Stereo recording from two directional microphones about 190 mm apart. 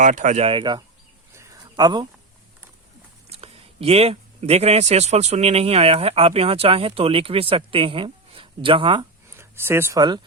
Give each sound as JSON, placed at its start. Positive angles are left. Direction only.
{"t": 0.0, "sound": "speech", "side_deg": -40}
{"t": 1.3, "sound": "a sound", "side_deg": -15}
{"t": 3.2, "sound": "speech", "side_deg": -35}
{"t": 9.3, "sound": "speech", "side_deg": -15}